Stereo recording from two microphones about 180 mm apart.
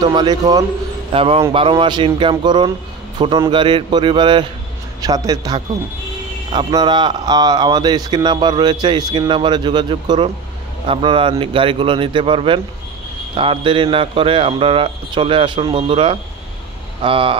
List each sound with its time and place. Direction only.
0.0 s a man's voice: 25° right (ahead or behind)